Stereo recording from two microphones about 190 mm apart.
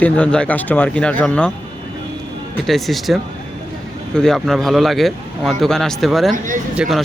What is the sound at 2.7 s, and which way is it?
Speech, centre (ahead or behind).